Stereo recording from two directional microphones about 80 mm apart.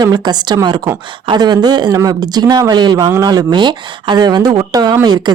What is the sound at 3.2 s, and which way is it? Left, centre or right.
Speech, right.